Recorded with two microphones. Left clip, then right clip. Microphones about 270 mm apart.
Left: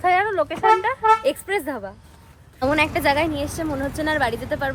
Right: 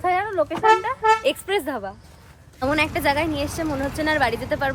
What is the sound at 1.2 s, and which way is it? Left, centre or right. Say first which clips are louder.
A woman's voice: even; centre.